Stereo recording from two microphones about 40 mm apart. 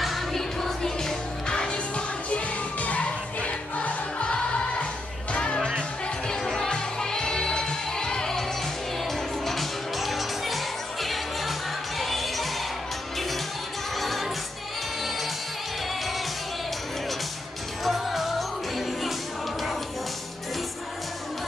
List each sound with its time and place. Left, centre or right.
0.0 s music: centre
0.6 s music: centre
2.2 s music: left; by 12.4 s centre
13.9 s music: centre
17.8 s music: centre